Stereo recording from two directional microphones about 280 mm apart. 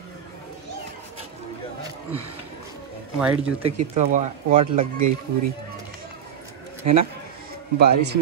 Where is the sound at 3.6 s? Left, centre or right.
Right.